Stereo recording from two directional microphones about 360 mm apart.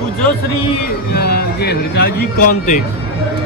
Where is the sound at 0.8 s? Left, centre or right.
Left.